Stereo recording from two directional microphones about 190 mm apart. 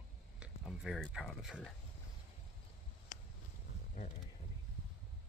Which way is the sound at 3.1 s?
40° left (ahead or behind).